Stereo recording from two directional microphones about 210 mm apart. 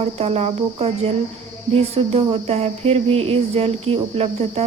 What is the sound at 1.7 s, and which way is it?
Speech, 30° right (ahead or behind).